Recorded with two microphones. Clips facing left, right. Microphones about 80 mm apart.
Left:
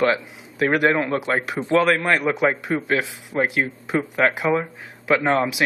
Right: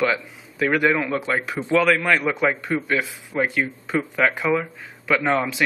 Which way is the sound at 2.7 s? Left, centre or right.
Left.